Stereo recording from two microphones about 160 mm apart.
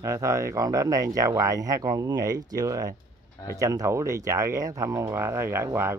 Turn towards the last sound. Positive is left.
turn(degrees=-15)  # may be behind; listen again after turning